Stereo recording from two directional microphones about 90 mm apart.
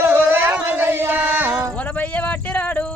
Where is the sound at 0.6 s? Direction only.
25° right (ahead or behind).